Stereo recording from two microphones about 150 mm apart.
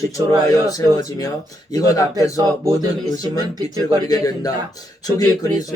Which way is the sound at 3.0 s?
25° left (ahead or behind).